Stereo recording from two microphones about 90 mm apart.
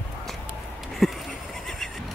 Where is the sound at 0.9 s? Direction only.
Centre (ahead or behind).